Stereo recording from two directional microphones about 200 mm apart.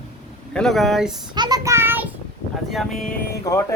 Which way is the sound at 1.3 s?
20° right (ahead or behind).